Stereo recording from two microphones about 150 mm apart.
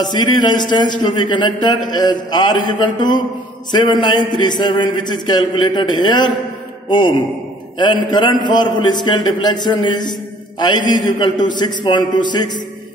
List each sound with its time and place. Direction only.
0.0 s a man's voice: 30° left (ahead or behind)
11.1 s a man's voice: 30° left (ahead or behind)